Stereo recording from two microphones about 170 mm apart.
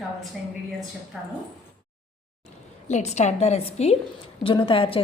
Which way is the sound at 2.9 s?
40° left (ahead or behind).